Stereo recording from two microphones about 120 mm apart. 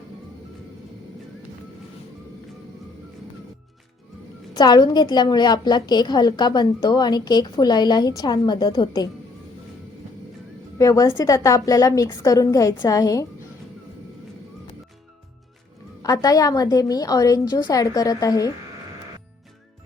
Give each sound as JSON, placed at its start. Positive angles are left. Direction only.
{"t": 4.5, "sound": "a woman's voice", "side_deg": 35}
{"t": 10.8, "sound": "a woman's voice", "side_deg": 30}
{"t": 16.0, "sound": "a woman's voice", "side_deg": 30}